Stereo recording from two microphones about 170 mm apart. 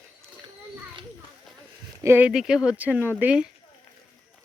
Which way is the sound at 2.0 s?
10° right (ahead or behind).